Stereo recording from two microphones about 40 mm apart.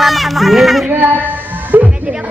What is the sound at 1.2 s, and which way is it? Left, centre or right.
Music, right.